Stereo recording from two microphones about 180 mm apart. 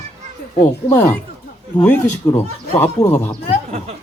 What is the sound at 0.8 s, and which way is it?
Speech, 15° left (ahead or behind).